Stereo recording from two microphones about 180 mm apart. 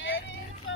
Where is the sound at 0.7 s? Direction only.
90° left.